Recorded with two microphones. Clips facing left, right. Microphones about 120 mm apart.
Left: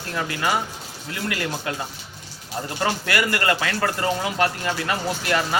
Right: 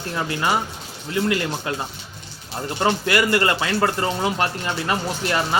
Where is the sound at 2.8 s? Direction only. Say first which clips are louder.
Right 4 dB; 25° right (ahead or behind).